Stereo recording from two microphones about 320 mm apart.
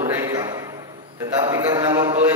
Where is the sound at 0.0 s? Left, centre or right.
Centre.